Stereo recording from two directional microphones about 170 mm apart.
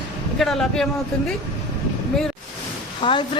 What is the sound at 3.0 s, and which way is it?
Speech, 30° left (ahead or behind).